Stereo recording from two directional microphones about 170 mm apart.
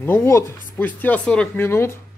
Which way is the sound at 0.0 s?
15° left (ahead or behind).